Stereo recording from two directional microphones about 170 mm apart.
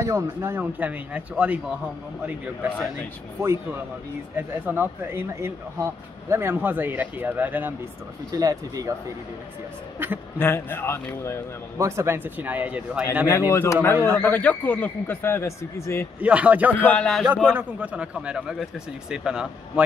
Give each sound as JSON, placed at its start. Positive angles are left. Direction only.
{"t": 0.0, "sound": "speech", "side_deg": -15}
{"t": 4.4, "sound": "speech", "side_deg": -10}
{"t": 9.9, "sound": "speech", "side_deg": -10}
{"t": 10.4, "sound": "speech", "side_deg": 15}
{"t": 11.8, "sound": "speech", "side_deg": -15}
{"t": 13.3, "sound": "speech", "side_deg": 15}
{"t": 16.2, "sound": "speech", "side_deg": -10}
{"t": 16.8, "sound": "speech", "side_deg": 5}
{"t": 17.5, "sound": "speech", "side_deg": -10}